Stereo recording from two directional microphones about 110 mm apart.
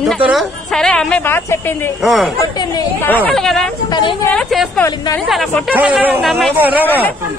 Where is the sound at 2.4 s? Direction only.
35° left (ahead or behind).